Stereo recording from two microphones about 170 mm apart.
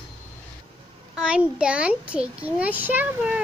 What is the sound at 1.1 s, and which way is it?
A child's voice, 5° right (ahead or behind).